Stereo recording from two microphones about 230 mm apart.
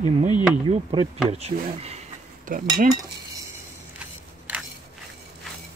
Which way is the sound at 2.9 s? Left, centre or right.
Centre.